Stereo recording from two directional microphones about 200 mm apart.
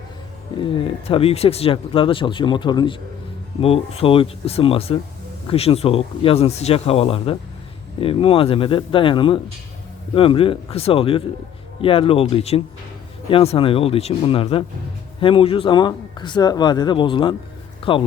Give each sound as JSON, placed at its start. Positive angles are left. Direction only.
{"t": 0.6, "sound": "speech", "side_deg": 25}